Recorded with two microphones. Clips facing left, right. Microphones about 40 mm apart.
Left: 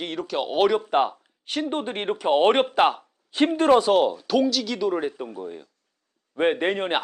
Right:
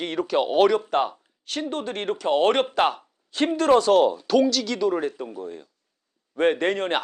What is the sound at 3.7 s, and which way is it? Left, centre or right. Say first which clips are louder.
Speech: right 2 dB; centre.